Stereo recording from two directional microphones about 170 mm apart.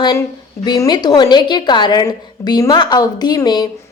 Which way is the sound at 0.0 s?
25° left (ahead or behind).